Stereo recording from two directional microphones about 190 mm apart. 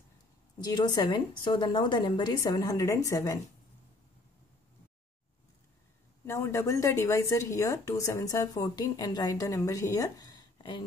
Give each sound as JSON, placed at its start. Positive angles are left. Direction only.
{"t": 0.7, "sound": "a woman's voice", "side_deg": 20}
{"t": 6.2, "sound": "a woman's voice", "side_deg": 15}